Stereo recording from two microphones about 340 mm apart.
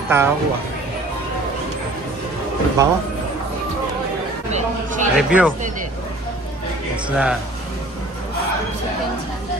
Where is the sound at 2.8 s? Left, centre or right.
Centre.